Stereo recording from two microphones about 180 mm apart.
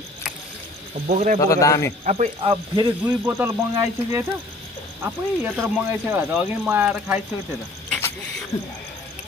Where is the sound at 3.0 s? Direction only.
10° right (ahead or behind).